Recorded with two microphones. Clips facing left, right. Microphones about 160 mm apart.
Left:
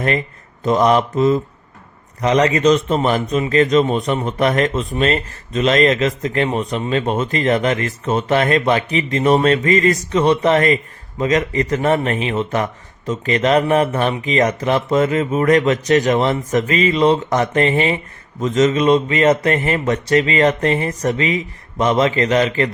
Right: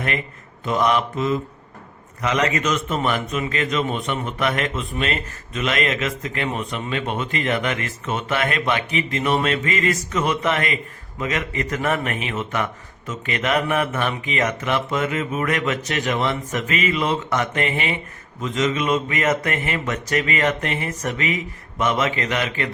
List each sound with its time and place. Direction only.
0.6 s speech: 40° left (ahead or behind)